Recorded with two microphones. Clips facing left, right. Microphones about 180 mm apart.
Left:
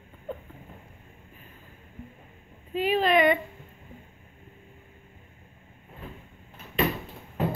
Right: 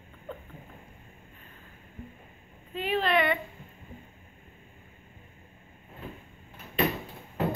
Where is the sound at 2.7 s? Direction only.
10° left (ahead or behind).